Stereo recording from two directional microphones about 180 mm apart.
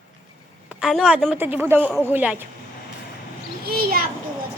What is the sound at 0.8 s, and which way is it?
A woman's voice, centre (ahead or behind).